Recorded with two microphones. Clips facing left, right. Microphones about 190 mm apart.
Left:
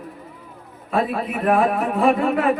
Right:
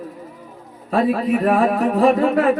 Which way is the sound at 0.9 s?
40° right (ahead or behind).